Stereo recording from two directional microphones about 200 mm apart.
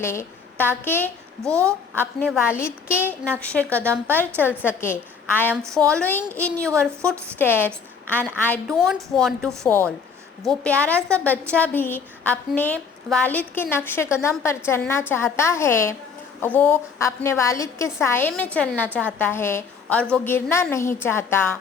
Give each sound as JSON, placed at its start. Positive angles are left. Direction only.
{"t": 0.0, "sound": "a woman's voice", "side_deg": 15}
{"t": 5.6, "sound": "a woman's voice", "side_deg": -15}
{"t": 5.9, "sound": "a woman's voice", "side_deg": 10}